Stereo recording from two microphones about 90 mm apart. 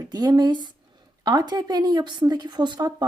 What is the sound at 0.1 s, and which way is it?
Speech, 45° right (ahead or behind).